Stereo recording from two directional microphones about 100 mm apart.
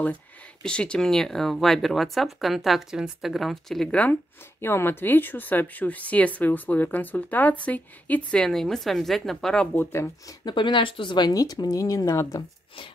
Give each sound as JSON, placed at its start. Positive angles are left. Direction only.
{"t": 0.6, "sound": "speech", "side_deg": 10}
{"t": 4.6, "sound": "speech", "side_deg": 25}
{"t": 10.4, "sound": "speech", "side_deg": 50}